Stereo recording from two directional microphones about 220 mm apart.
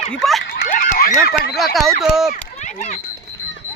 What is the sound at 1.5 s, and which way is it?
Speech, centre (ahead or behind).